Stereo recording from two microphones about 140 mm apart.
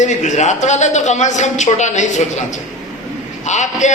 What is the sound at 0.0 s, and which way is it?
A man's voice, 60° left (ahead or behind).